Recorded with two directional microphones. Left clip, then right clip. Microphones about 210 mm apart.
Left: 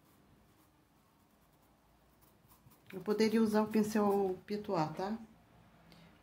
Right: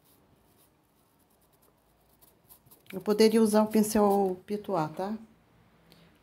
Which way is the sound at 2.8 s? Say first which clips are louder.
Right 9 dB; 30° right (ahead or behind).